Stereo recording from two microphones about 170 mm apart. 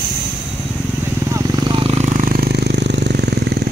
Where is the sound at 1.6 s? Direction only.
30° right (ahead or behind); by 3.4 s 75° right (ahead or behind).